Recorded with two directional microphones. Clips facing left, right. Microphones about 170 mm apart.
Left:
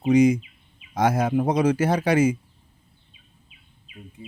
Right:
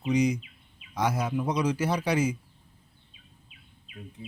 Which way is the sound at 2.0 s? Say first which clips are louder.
Left 7 dB; 90° left.